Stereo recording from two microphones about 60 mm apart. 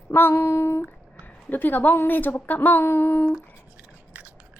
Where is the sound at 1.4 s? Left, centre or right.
Left.